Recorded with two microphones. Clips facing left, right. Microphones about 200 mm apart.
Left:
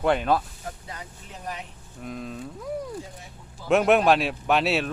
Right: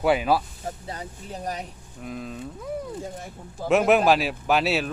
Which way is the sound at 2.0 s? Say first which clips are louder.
Right 1 dB; centre (ahead or behind).